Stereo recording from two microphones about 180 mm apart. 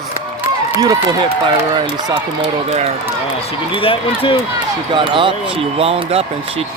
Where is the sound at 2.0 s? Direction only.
30° right (ahead or behind).